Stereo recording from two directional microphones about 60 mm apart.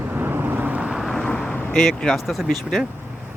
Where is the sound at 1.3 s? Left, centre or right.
Centre.